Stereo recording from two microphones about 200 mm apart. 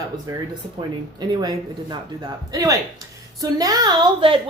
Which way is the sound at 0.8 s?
20° right (ahead or behind).